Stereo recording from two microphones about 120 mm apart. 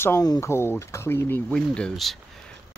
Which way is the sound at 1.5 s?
5° left (ahead or behind).